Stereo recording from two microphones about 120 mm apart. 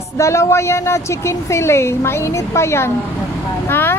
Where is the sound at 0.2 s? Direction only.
25° left (ahead or behind).